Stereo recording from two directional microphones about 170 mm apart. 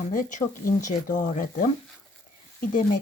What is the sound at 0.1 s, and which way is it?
Speech, 50° left (ahead or behind).